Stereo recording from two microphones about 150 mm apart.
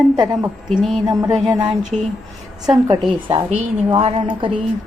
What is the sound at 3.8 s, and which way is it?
Speech, 35° right (ahead or behind).